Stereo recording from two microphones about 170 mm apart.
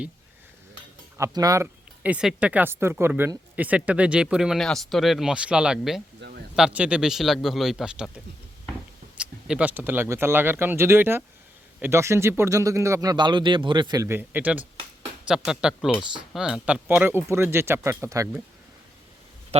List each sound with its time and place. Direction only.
1.2 s speech: 20° right (ahead or behind)
2.0 s speech: 5° right (ahead or behind)
6.1 s a sound: 90° right
6.6 s speech: 5° right (ahead or behind)